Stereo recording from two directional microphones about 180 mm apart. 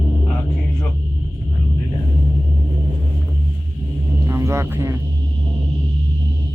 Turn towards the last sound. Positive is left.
turn(degrees=-15)  # may be behind; listen again after turning